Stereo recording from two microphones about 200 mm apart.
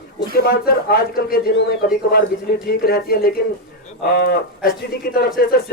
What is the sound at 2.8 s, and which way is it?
Speech, 50° left (ahead or behind).